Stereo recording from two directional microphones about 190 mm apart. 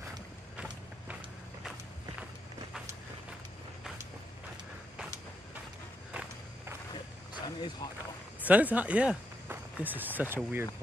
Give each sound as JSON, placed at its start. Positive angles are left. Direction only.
{"t": 7.4, "sound": "speech", "side_deg": 20}
{"t": 8.5, "sound": "speech", "side_deg": -10}